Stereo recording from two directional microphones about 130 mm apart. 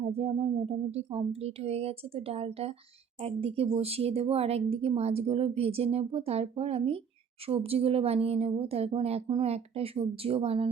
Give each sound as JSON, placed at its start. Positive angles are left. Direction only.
{"t": 0.0, "sound": "speech", "side_deg": -50}